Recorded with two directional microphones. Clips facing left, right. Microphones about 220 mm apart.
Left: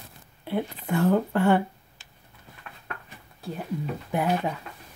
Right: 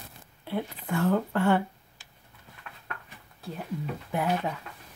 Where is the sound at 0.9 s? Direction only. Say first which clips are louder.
Left 3 dB; 20° left (ahead or behind).